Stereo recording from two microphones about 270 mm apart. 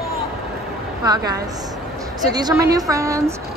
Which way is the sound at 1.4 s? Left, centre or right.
Centre.